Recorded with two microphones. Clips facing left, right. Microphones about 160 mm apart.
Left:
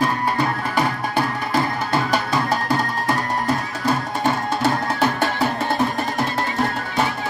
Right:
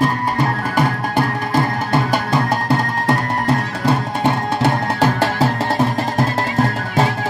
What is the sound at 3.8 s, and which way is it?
Music, 25° right (ahead or behind).